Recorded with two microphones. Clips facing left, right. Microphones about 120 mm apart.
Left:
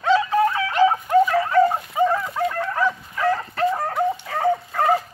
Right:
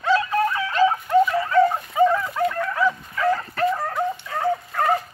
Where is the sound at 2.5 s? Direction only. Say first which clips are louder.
Even; 35° left (ahead or behind).